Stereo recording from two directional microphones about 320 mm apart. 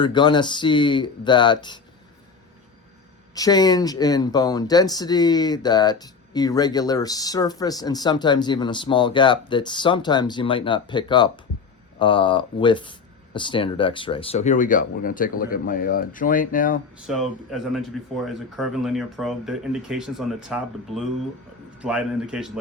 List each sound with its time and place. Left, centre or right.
0.0 s speech: centre
3.3 s speech: centre
17.1 s speech: centre